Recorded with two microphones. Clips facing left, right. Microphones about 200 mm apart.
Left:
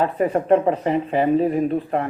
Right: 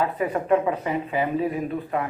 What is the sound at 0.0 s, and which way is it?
A man's voice, 40° left (ahead or behind).